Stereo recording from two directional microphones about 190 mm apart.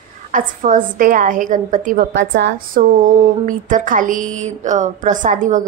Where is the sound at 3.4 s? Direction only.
45° right (ahead or behind).